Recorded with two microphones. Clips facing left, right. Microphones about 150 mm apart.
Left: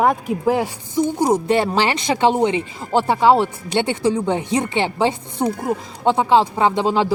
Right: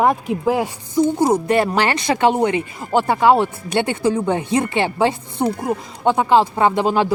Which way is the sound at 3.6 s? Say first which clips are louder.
Even; 20° left (ahead or behind).